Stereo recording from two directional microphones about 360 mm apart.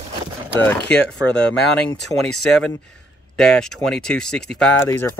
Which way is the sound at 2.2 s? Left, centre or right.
Centre.